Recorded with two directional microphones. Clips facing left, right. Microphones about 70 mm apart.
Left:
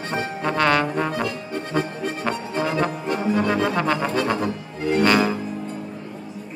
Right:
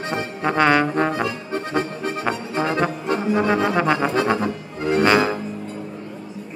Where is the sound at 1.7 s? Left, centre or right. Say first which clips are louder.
Even; right.